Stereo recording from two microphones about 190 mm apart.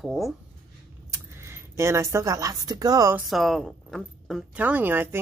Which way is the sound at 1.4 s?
15° right (ahead or behind).